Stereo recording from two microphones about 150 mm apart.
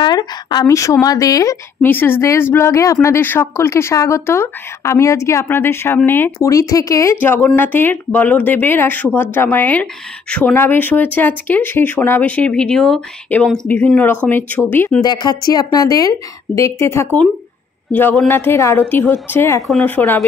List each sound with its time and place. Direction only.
0.0 s a woman's voice: 30° left (ahead or behind); by 14.6 s 10° left (ahead or behind)
15.0 s a woman's voice: 25° left (ahead or behind)